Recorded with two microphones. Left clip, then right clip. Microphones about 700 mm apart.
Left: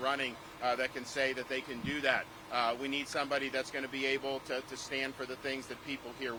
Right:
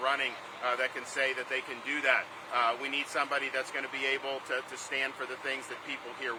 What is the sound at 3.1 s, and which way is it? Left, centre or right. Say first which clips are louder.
Speech: right 2 dB; left.